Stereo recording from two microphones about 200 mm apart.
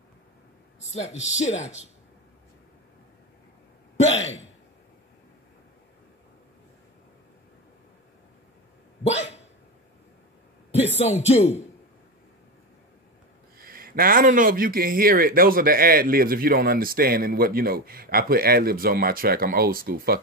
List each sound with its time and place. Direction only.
0.7 s speech: 35° left (ahead or behind)
9.0 s dog: 30° left (ahead or behind)
10.7 s a man's voice: 30° left (ahead or behind)
13.6 s speech: 45° right (ahead or behind)